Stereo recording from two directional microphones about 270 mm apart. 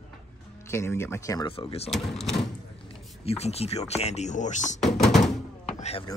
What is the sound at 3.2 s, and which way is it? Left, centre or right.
Speech, left.